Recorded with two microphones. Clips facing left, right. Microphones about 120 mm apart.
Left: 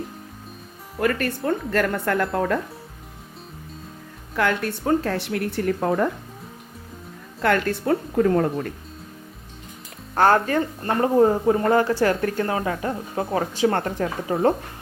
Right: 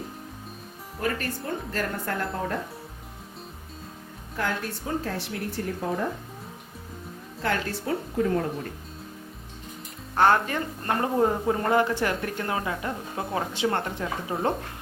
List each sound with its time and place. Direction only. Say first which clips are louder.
0.9 s speech: left 6 dB; 65° left (ahead or behind)
4.4 s speech: left 7 dB; 70° left (ahead or behind)
7.4 s speech: left 7 dB; 60° left (ahead or behind)
10.2 s speech: left 4 dB; 40° left (ahead or behind)
13.7 s a woman's voice: left 5 dB; 50° left (ahead or behind)